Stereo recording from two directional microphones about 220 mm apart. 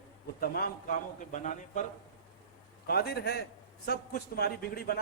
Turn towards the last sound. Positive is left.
turn(degrees=45)  # may be behind; listen again after turning